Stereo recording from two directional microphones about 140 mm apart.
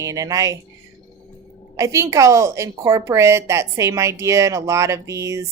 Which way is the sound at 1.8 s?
20° right (ahead or behind).